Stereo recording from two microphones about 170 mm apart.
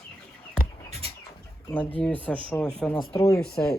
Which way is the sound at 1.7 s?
10° left (ahead or behind).